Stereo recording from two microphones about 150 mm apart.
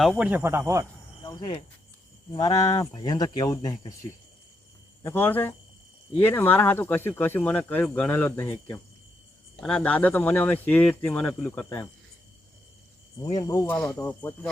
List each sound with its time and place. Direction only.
0.2 s speech: 10° right (ahead or behind)
1.2 s speech: 30° left (ahead or behind)
5.0 s speech: 15° left (ahead or behind)
13.3 s speech: 25° left (ahead or behind)
13.7 s speech: 5° left (ahead or behind)